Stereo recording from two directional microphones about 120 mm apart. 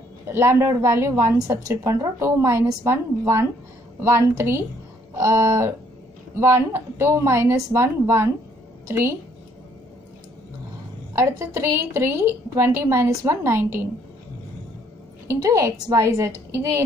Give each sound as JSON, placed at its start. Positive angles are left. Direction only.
{"t": 0.3, "sound": "a woman's voice", "side_deg": -20}
{"t": 11.1, "sound": "a woman's voice", "side_deg": -25}
{"t": 15.2, "sound": "a woman's voice", "side_deg": -25}